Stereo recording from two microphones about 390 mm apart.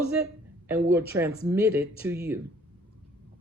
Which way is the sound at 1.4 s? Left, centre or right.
Centre.